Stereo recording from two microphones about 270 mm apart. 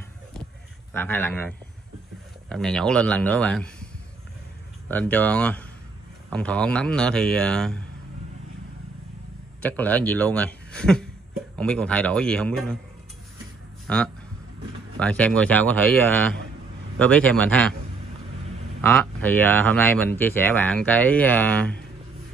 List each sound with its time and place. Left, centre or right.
0.9 s speech: centre
2.5 s a man's voice: centre
9.6 s a man's voice: centre
13.8 s a man's voice: centre
18.8 s speech: centre